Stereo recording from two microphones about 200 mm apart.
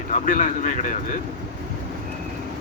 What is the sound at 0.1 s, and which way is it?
Speech, 40° left (ahead or behind).